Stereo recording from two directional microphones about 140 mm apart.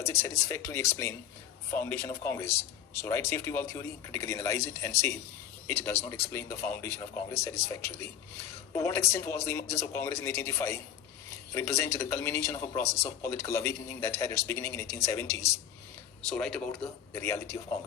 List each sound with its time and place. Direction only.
0.0 s speech: 20° left (ahead or behind)
16.2 s speech: 5° left (ahead or behind); by 17.6 s 20° left (ahead or behind)